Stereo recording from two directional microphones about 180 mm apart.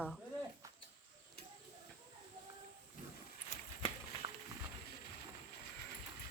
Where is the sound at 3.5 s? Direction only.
45° left (ahead or behind).